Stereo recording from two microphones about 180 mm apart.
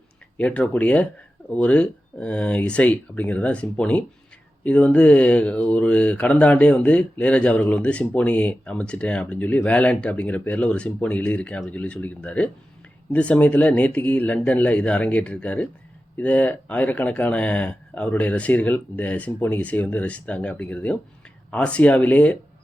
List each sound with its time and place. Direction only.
0.3 s speech: 5° left (ahead or behind)